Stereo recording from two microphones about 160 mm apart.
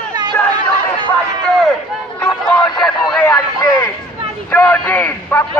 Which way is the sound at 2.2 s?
5° left (ahead or behind).